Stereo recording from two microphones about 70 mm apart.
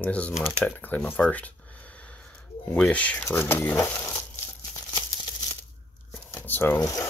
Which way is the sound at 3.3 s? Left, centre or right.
Left.